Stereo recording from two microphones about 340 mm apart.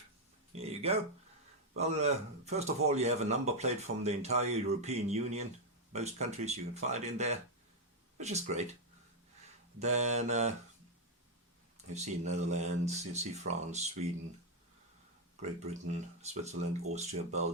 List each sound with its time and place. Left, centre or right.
0.5 s a sound: centre
1.7 s a man's voice: centre
9.7 s a man's voice: centre
11.9 s a man's voice: centre
15.9 s a man's voice: centre